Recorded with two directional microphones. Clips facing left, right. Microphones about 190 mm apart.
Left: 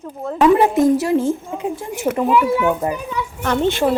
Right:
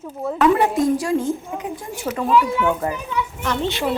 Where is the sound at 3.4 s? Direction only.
50° left (ahead or behind).